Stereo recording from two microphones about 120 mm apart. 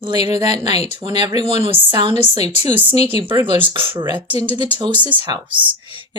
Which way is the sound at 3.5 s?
45° right (ahead or behind).